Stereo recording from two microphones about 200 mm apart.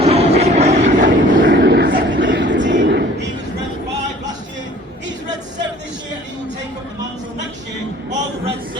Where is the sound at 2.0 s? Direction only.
65° right (ahead or behind).